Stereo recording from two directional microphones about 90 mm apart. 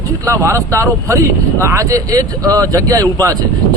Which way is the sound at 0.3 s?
35° right (ahead or behind).